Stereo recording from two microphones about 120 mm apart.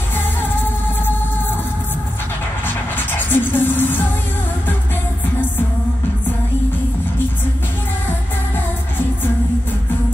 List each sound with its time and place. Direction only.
2.6 s music: 15° left (ahead or behind)